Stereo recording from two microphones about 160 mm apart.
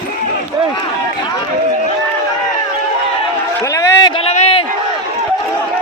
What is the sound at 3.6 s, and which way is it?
Run, 20° left (ahead or behind).